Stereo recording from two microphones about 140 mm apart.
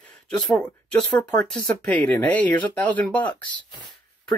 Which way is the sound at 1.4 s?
5° left (ahead or behind).